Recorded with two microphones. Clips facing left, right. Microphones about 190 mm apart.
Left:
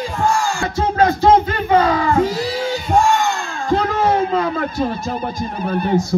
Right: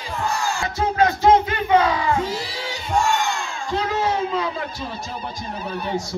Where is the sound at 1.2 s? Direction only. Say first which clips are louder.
Left 3 dB; 45° left (ahead or behind).